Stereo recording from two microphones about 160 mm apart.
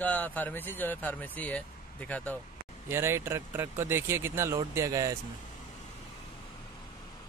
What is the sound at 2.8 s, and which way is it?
Speech, 15° right (ahead or behind).